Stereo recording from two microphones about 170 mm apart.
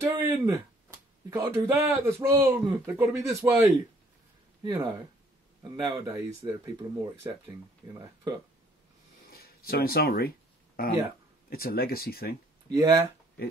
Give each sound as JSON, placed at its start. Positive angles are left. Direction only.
{"t": 0.0, "sound": "speech", "side_deg": -20}
{"t": 4.6, "sound": "speech", "side_deg": -25}
{"t": 9.3, "sound": "speech", "side_deg": 65}
{"t": 12.6, "sound": "speech", "side_deg": -20}